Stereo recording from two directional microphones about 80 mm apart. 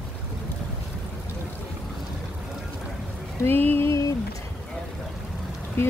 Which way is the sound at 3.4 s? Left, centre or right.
Left.